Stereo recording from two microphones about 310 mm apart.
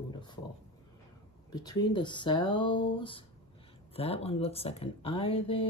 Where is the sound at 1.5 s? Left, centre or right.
Centre.